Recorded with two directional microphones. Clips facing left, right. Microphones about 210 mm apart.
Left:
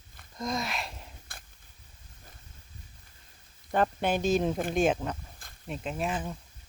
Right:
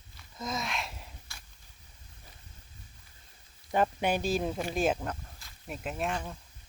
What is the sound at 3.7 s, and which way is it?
Speech, 10° right (ahead or behind).